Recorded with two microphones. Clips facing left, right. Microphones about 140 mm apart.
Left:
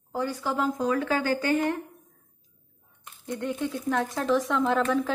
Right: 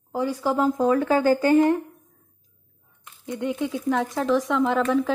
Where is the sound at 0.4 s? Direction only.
35° right (ahead or behind).